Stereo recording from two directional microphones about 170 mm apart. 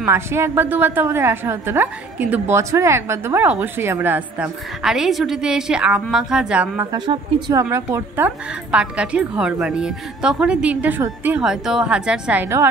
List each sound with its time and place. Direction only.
0.0 s a woman's voice: 15° right (ahead or behind)